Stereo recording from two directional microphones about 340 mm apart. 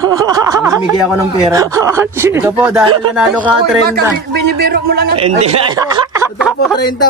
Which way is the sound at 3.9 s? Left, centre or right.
Right.